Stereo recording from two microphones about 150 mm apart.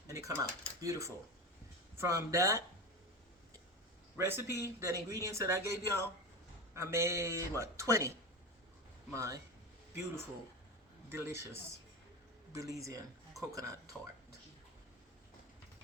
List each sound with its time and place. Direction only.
0.1 s speech: 20° right (ahead or behind)
4.2 s a man's voice: 15° right (ahead or behind)
9.1 s speech: 20° right (ahead or behind)
11.1 s a man's voice: 15° right (ahead or behind)